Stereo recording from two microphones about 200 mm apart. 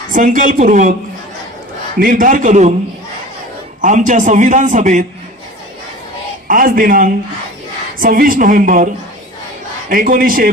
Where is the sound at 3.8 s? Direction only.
40° right (ahead or behind).